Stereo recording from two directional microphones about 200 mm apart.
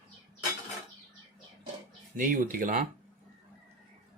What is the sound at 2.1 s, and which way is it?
Speech, 45° right (ahead or behind).